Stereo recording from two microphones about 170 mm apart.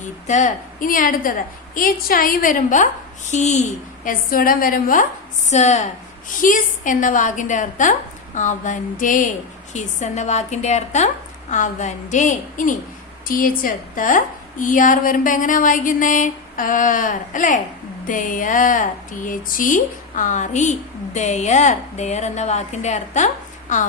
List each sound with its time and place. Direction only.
0.0 s speech: 45° left (ahead or behind)
4.0 s a woman's voice: 55° left (ahead or behind)
5.5 s speech: 45° left (ahead or behind)